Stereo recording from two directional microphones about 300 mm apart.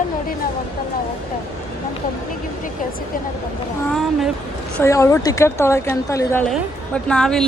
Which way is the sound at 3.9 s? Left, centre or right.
Centre.